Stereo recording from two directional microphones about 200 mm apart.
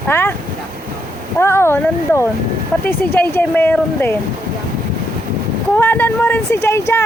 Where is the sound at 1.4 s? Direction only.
10° left (ahead or behind).